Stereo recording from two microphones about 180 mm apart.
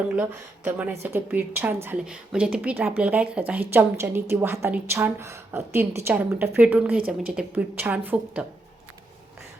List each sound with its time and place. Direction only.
0.2 s a woman's voice: 10° right (ahead or behind)